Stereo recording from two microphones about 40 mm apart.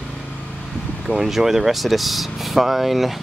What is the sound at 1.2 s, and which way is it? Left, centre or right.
Speech, centre.